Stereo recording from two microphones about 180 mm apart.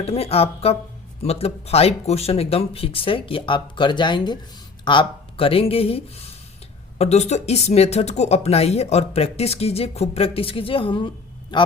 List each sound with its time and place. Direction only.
0.0 s a man's voice: 35° left (ahead or behind)